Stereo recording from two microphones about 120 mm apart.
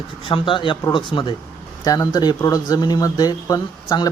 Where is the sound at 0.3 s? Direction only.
45° left (ahead or behind).